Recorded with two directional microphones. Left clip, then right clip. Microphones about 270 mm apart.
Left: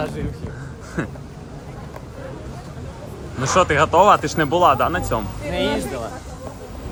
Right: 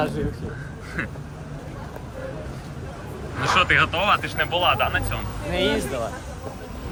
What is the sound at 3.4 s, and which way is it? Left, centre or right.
Speech, centre.